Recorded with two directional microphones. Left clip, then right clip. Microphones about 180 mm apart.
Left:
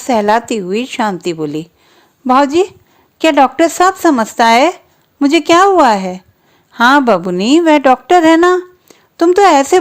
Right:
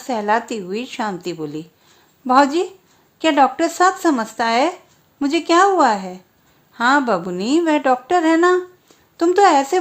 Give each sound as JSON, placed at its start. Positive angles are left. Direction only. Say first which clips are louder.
{"t": 0.0, "sound": "a woman's voice", "louder": "left 7 dB", "side_deg": 40}